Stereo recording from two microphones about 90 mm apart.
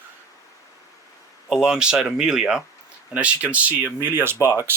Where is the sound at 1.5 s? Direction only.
10° right (ahead or behind); by 4.3 s 25° right (ahead or behind).